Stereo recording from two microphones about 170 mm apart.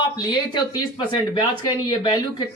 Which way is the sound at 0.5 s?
25° left (ahead or behind).